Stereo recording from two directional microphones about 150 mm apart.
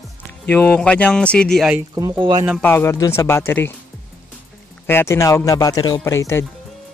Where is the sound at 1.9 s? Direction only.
30° right (ahead or behind).